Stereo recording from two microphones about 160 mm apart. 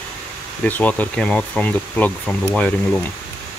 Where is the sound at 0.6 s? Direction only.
10° left (ahead or behind).